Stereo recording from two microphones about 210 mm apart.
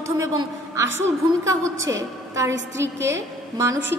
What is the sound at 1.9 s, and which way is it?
Speech, 15° right (ahead or behind).